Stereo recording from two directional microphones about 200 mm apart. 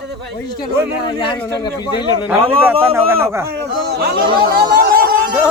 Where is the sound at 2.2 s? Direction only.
10° right (ahead or behind).